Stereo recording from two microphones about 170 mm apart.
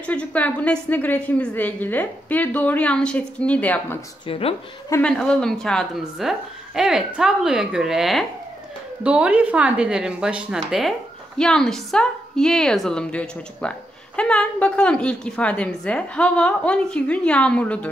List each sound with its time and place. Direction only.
0.0 s a woman's voice: 5° left (ahead or behind)
4.3 s speech: 35° left (ahead or behind)
5.0 s speech: 5° left (ahead or behind)